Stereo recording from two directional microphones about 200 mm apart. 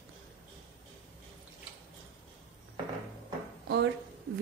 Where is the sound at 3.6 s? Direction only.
60° right (ahead or behind).